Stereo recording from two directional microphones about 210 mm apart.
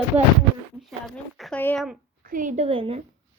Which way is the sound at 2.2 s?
40° right (ahead or behind).